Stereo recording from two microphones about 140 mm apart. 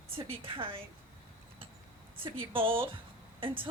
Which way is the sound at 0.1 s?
40° right (ahead or behind).